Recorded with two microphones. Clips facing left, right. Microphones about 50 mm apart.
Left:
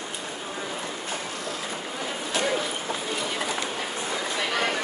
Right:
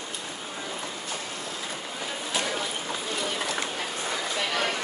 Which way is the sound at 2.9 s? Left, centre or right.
Centre.